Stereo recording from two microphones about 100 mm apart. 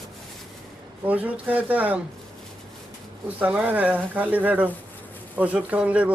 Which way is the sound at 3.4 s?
15° right (ahead or behind).